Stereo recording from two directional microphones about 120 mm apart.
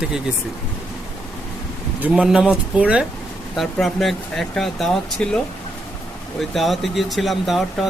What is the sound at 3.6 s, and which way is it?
Speech, centre (ahead or behind).